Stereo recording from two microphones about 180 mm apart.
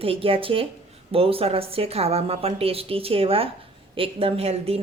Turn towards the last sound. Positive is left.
turn(degrees=-35)  # may be behind; listen again after turning